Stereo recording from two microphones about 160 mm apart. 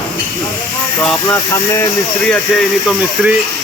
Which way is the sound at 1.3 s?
15° left (ahead or behind).